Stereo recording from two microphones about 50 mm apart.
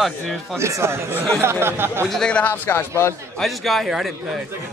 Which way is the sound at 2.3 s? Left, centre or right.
Left.